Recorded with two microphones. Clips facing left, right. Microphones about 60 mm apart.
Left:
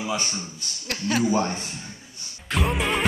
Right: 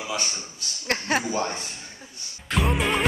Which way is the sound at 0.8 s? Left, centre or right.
Right.